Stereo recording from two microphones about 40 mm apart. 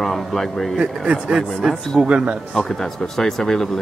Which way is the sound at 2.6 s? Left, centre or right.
Centre.